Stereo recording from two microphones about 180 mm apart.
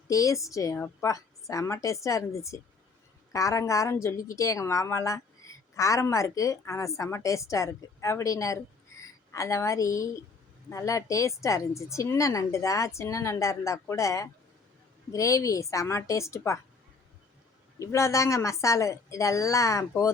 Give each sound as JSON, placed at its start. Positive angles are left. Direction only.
{"t": 0.1, "sound": "a woman's voice", "side_deg": 20}
{"t": 17.7, "sound": "a woman's voice", "side_deg": 15}